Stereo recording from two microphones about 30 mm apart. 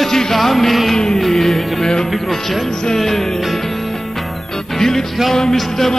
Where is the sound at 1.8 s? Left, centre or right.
Left.